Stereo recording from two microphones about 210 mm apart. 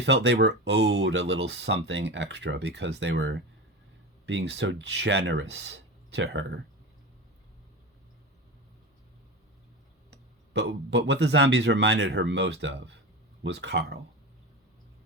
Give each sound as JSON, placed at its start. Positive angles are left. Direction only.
{"t": 0.0, "sound": "speech", "side_deg": -55}
{"t": 10.5, "sound": "speech", "side_deg": -55}